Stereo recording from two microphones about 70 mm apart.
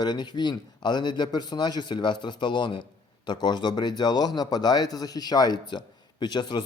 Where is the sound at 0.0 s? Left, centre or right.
Left.